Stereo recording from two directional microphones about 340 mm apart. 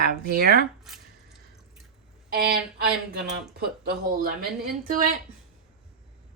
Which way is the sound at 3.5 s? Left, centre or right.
Right.